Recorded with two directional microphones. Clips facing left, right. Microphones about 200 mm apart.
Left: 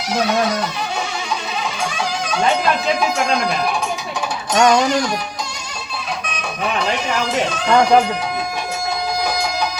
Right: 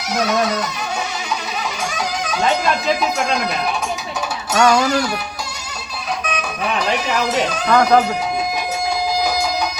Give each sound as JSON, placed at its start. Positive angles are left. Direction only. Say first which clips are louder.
{"t": 4.5, "sound": "speech", "louder": "left 1 dB", "side_deg": 25}
{"t": 7.7, "sound": "speech", "louder": "left 1 dB", "side_deg": 25}